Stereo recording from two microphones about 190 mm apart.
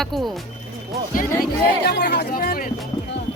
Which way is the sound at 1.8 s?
60° left (ahead or behind).